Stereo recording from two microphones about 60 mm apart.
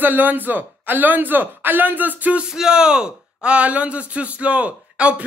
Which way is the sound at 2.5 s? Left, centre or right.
Centre.